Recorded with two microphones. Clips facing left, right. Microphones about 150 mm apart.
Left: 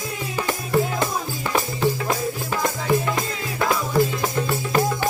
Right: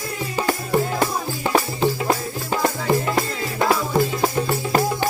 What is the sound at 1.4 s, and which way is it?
Music, 25° right (ahead or behind).